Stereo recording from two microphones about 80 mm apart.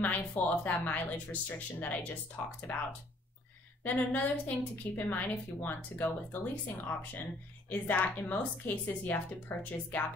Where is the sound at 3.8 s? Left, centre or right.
Centre.